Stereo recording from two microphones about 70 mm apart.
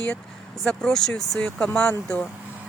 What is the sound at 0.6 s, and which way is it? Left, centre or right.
A woman's voice, centre.